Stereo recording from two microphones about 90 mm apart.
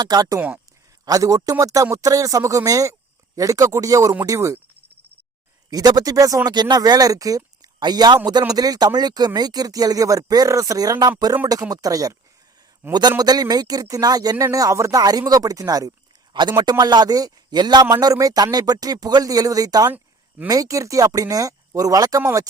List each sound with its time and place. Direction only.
0.0 s speech: 45° right (ahead or behind)
0.3 s speech: 15° right (ahead or behind)
1.0 s a man's voice: 40° right (ahead or behind)
5.7 s a man's voice: 45° right (ahead or behind)
16.3 s a man's voice: 55° right (ahead or behind)